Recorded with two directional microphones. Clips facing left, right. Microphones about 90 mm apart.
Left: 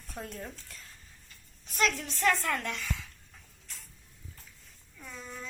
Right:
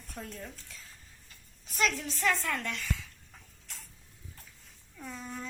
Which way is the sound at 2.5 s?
10° left (ahead or behind).